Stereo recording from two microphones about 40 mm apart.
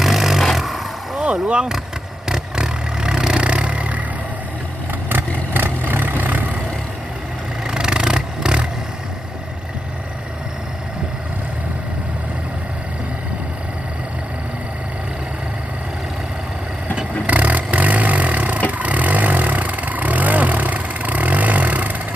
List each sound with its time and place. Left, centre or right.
0.0 s vehicle: centre
1.2 s speech: right
2.2 s vehicle: centre; by 4.0 s right
5.0 s vehicle: right
7.6 s vehicle: right
17.2 s vehicle: right